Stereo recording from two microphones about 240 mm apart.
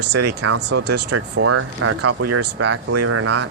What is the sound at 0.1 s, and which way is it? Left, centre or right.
Speech, right.